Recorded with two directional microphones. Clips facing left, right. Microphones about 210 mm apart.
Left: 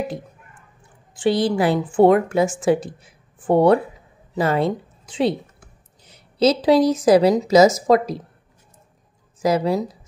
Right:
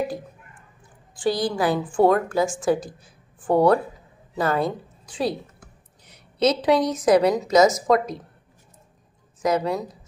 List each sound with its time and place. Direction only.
1.1 s a woman's voice: 25° left (ahead or behind)
9.4 s a woman's voice: 30° left (ahead or behind)